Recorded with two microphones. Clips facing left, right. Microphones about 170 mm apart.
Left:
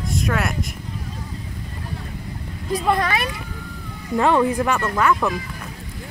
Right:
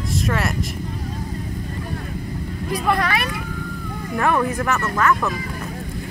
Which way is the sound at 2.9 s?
20° left (ahead or behind).